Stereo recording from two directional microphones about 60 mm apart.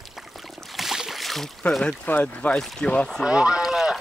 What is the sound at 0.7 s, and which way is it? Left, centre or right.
Boat, centre.